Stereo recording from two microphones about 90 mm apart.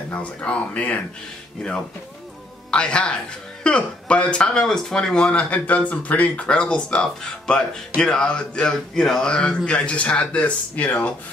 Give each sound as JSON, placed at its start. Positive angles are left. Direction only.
{"t": 0.1, "sound": "speech", "side_deg": 15}
{"t": 2.7, "sound": "speech", "side_deg": 10}